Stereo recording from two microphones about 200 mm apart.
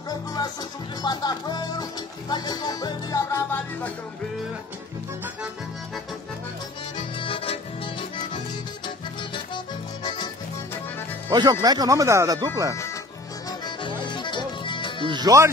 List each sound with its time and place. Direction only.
0.1 s speech: 20° left (ahead or behind)
1.0 s music: 20° left (ahead or behind)
7.2 s accordion: 25° left (ahead or behind)
10.0 s music: 20° left (ahead or behind)
11.2 s speech: 20° right (ahead or behind)
13.5 s music: 25° left (ahead or behind)
15.0 s speech: 20° right (ahead or behind)